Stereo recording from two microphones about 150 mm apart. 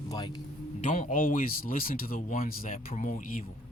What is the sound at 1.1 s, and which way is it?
Speech, 65° left (ahead or behind).